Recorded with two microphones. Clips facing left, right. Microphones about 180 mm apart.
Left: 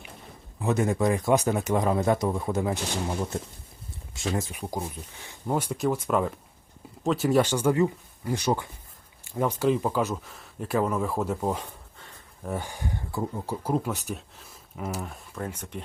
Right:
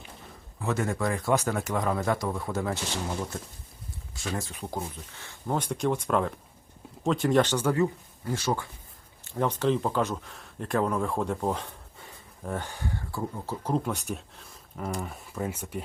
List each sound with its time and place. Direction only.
0.6 s speech: 20° left (ahead or behind)
4.1 s speech: 20° left (ahead or behind); by 15.8 s 5° right (ahead or behind)